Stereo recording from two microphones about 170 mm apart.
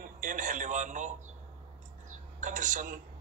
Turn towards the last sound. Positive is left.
turn(degrees=-50)  # may be behind; listen again after turning